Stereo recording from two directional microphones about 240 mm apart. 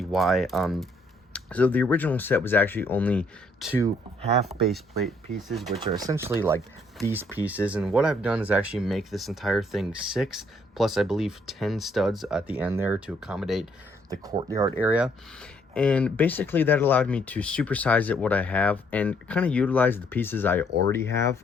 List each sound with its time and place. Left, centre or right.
0.0 s speech: centre
4.2 s speech: right
4.6 s speech: centre
5.8 s speech: centre
14.3 s speech: centre